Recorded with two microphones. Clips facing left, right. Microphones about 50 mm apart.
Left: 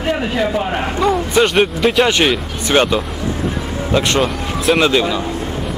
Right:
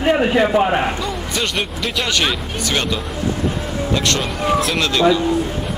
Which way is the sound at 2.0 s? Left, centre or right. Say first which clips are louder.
Left 5 dB; left.